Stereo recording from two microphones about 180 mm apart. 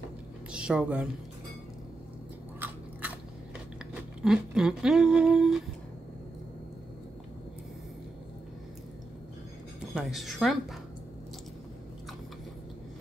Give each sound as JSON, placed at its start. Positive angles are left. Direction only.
{"t": 0.5, "sound": "a woman's voice", "side_deg": -5}
{"t": 3.9, "sound": "humming", "side_deg": -5}
{"t": 9.9, "sound": "a woman's voice", "side_deg": 0}